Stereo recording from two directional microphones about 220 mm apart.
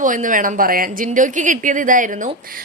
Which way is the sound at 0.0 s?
35° right (ahead or behind).